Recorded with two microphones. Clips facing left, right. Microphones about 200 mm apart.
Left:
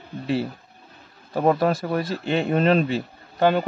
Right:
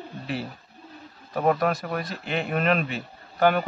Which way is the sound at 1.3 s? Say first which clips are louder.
Left 3 dB; 30° left (ahead or behind).